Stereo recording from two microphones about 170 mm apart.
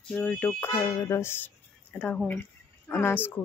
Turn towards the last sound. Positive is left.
turn(degrees=10)  # may be behind; listen again after turning